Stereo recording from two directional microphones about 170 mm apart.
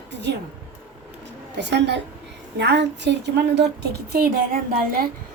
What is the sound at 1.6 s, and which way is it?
A woman's voice, 90° right.